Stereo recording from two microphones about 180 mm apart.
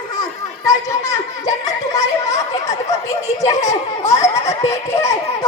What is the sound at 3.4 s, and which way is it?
A child's voice, 20° left (ahead or behind).